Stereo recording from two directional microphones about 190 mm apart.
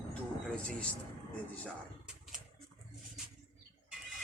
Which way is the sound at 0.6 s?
5° left (ahead or behind).